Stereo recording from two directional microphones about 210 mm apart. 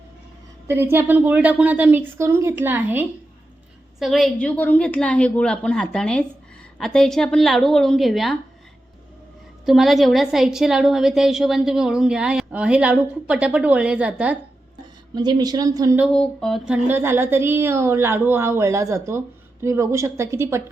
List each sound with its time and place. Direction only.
0.7 s a woman's voice: 10° right (ahead or behind)
9.6 s a woman's voice: centre (ahead or behind)
15.1 s speech: 20° right (ahead or behind)
16.1 s speech: centre (ahead or behind)